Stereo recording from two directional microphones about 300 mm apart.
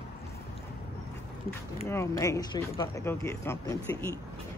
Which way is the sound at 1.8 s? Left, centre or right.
Centre.